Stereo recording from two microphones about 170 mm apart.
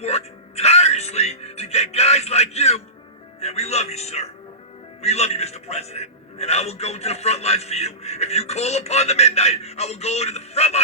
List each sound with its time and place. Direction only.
0.0 s music: 40° left (ahead or behind)
3.4 s a man's voice: 40° left (ahead or behind)